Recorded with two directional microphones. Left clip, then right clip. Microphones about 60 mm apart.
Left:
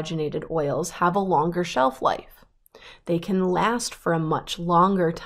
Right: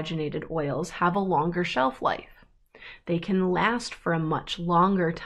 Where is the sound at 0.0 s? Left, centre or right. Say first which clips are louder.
Left 3 dB; left.